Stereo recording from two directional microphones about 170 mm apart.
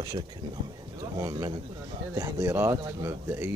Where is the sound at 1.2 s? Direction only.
20° right (ahead or behind).